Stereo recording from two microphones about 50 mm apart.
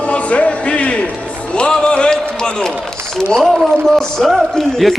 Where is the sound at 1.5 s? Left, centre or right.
Centre.